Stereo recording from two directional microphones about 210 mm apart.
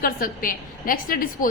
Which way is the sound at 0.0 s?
40° left (ahead or behind).